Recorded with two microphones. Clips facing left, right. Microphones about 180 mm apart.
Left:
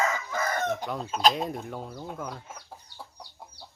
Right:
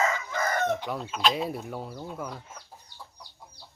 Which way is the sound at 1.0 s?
35° left (ahead or behind).